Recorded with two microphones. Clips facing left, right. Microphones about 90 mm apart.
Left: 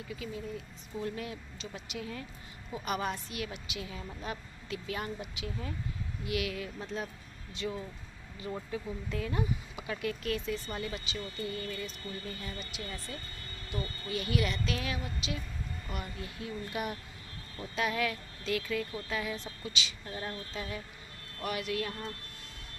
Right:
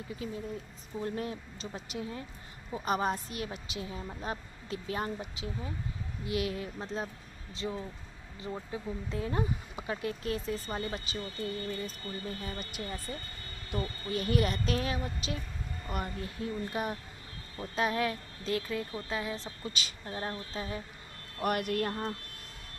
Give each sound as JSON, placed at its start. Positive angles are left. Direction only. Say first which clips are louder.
{"t": 0.2, "sound": "speech", "louder": "right 2 dB", "side_deg": -35}
{"t": 21.4, "sound": "speech", "louder": "right 4 dB", "side_deg": -55}